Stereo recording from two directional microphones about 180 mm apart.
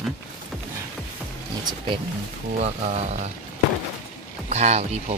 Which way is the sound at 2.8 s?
40° right (ahead or behind).